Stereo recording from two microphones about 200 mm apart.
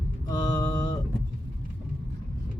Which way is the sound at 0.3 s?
20° left (ahead or behind).